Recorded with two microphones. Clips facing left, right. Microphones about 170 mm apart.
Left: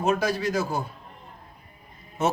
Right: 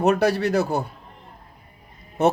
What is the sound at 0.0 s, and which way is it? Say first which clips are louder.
Speech: right 5 dB; 65° right (ahead or behind).